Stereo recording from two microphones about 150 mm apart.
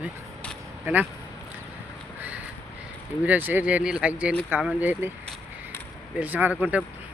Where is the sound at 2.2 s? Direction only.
10° right (ahead or behind).